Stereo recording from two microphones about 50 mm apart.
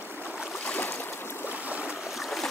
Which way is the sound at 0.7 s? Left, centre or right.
Left.